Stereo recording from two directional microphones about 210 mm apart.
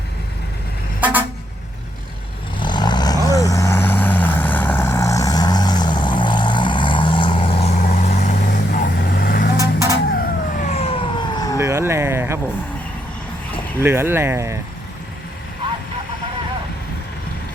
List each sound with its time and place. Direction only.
1.0 s vehicle: 10° right (ahead or behind)
2.6 s vehicle: 20° left (ahead or behind); by 9.5 s 45° left (ahead or behind)
9.6 s vehicle: 15° right (ahead or behind)
10.2 s vehicle: 40° left (ahead or behind); by 11.6 s 20° left (ahead or behind)
11.6 s a sound: 15° right (ahead or behind)
13.8 s speech: 10° right (ahead or behind)